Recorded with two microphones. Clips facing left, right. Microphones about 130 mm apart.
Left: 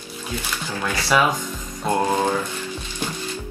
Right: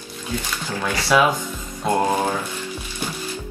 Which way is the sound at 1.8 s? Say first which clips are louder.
Right 1 dB; 15° right (ahead or behind).